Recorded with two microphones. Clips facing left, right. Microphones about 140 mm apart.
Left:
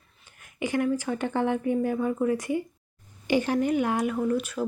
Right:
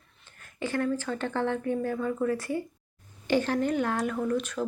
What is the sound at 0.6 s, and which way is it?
Speech, 15° left (ahead or behind).